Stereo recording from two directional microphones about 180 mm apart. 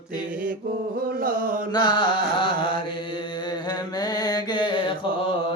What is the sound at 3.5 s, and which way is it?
Mantra, 20° left (ahead or behind).